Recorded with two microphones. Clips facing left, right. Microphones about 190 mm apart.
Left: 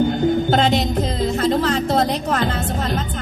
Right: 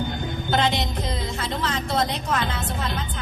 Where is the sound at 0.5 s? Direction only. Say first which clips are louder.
Left 6 dB; 45° left (ahead or behind).